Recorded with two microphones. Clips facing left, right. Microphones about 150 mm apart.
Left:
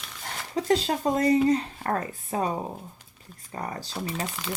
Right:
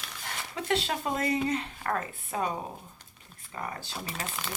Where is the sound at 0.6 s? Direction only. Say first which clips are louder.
Left 6 dB; 35° left (ahead or behind).